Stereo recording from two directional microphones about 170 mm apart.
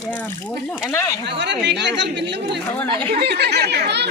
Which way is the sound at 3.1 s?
75° right (ahead or behind).